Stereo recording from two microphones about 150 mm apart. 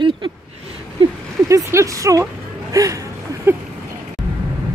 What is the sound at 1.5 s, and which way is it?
Speech, 20° right (ahead or behind).